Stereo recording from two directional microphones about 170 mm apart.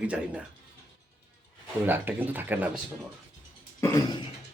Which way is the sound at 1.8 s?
10° right (ahead or behind).